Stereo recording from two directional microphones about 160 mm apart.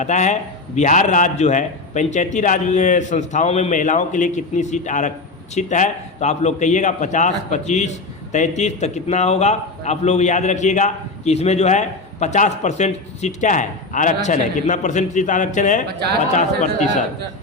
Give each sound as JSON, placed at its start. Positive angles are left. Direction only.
{"t": 0.0, "sound": "a man's voice", "side_deg": 45}